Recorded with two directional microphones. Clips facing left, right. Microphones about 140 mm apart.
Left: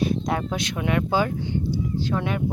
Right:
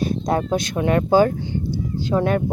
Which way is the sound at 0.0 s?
40° right (ahead or behind).